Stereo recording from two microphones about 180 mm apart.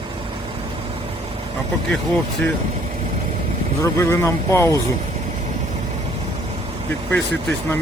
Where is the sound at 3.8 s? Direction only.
15° left (ahead or behind).